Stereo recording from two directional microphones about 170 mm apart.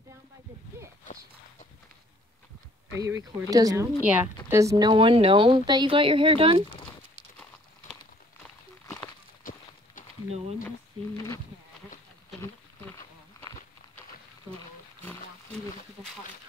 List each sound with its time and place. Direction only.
3.0 s a woman's voice: 15° right (ahead or behind)
4.0 s a woman's voice: 10° right (ahead or behind); by 6.6 s 35° right (ahead or behind)
9.4 s clip-clop: 55° left (ahead or behind)
15.0 s roaring cats: 5° left (ahead or behind)